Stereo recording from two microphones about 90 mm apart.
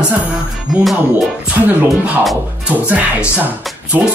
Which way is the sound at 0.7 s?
Centre (ahead or behind).